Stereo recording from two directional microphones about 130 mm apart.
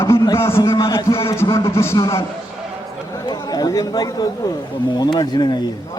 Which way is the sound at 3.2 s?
30° left (ahead or behind).